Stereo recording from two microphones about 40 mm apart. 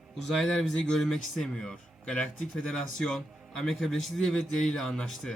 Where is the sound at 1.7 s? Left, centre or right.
Left.